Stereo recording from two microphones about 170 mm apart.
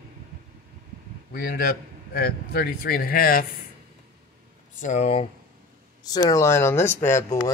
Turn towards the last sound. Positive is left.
turn(degrees=15)  # may be behind; listen again after turning